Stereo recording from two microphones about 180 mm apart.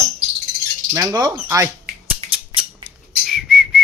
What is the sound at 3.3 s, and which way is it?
Whistling, centre (ahead or behind).